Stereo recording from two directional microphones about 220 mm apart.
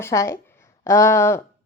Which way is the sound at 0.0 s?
15° left (ahead or behind).